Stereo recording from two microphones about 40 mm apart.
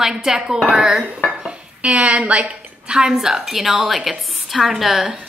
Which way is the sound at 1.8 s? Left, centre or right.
Right.